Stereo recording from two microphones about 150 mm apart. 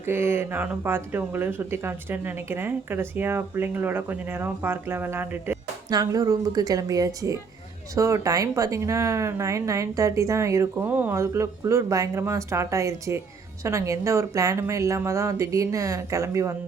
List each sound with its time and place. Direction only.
0.0 s speech: 15° right (ahead or behind)
5.9 s speech: 25° right (ahead or behind)